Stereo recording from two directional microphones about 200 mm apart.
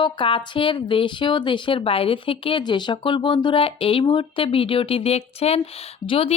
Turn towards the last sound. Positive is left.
turn(degrees=30)  # may be behind; listen again after turning